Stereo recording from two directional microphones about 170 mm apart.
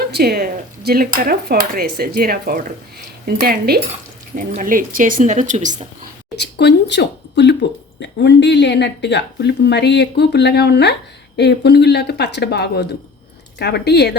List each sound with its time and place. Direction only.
0.0 s speech: 65° right (ahead or behind)
4.4 s speech: 50° right (ahead or behind)
6.4 s speech: 80° left